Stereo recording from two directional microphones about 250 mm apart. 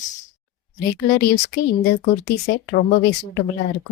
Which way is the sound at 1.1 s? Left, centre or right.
Left.